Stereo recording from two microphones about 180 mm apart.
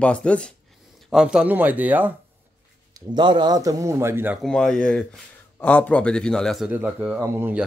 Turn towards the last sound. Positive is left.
turn(degrees=-10)  # may be behind; listen again after turning